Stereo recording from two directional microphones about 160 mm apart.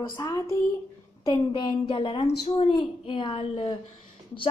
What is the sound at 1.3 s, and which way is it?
A woman's voice, 30° left (ahead or behind).